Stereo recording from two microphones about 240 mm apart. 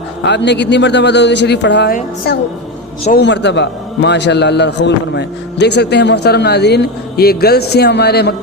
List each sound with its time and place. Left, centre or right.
0.2 s a man's voice: left